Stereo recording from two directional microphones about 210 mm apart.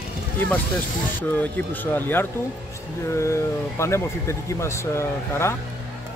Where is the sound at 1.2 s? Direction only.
10° left (ahead or behind).